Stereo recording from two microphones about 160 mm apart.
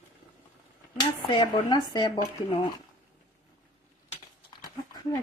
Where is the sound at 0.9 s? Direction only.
30° left (ahead or behind).